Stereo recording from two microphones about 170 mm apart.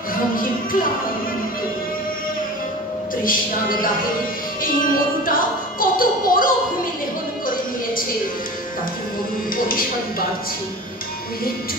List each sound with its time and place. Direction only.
3.3 s speech: 55° left (ahead or behind)